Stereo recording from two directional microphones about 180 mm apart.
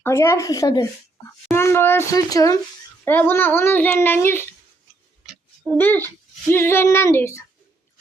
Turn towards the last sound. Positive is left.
turn(degrees=15)  # may be behind; listen again after turning